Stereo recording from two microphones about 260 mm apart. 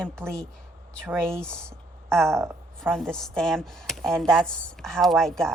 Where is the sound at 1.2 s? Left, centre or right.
Centre.